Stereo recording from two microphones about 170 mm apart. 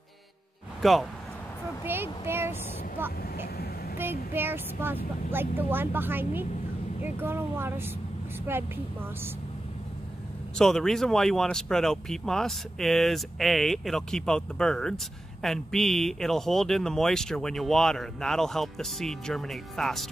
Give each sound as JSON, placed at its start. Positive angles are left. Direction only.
{"t": 0.8, "sound": "speech", "side_deg": 0}
{"t": 1.9, "sound": "speech", "side_deg": -15}
{"t": 3.5, "sound": "vehicle", "side_deg": 65}
{"t": 4.3, "sound": "speech", "side_deg": -15}
{"t": 10.5, "sound": "speech", "side_deg": 5}